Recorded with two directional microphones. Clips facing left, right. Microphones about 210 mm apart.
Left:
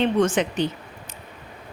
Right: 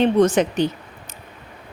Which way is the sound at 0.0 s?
40° right (ahead or behind).